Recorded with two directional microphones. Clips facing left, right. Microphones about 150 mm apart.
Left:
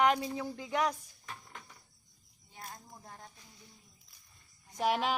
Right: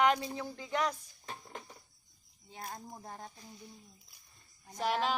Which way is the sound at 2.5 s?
35° right (ahead or behind).